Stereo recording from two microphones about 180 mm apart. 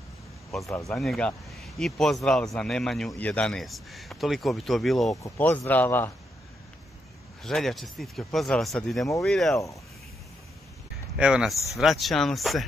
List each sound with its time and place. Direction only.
0.7 s speech: 15° left (ahead or behind)
0.9 s speech: centre (ahead or behind)
5.1 s speech: 15° left (ahead or behind)
7.4 s speech: centre (ahead or behind)
11.1 s speech: 5° right (ahead or behind)